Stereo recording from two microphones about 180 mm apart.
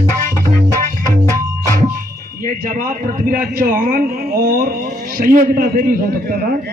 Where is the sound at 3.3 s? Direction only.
50° right (ahead or behind).